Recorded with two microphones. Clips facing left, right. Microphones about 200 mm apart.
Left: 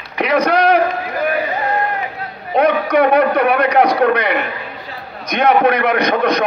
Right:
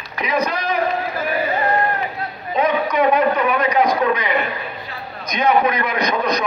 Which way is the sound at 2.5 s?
65° left (ahead or behind).